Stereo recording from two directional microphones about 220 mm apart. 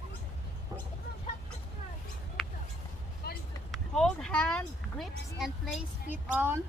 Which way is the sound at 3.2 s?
45° left (ahead or behind).